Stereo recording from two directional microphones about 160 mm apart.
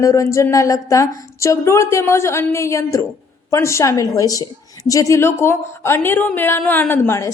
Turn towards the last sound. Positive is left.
turn(degrees=15)  # may be behind; listen again after turning